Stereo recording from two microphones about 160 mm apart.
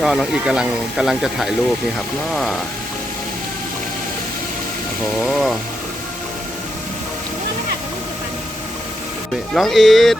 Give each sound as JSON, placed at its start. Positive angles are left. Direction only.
{"t": 0.0, "sound": "speech", "side_deg": 0}
{"t": 5.2, "sound": "speech", "side_deg": 0}
{"t": 9.6, "sound": "speech", "side_deg": 0}